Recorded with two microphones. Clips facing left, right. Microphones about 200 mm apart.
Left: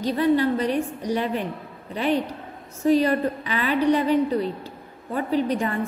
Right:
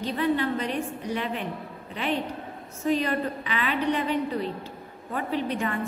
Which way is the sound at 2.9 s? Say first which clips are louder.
Left 6 dB; 40° left (ahead or behind).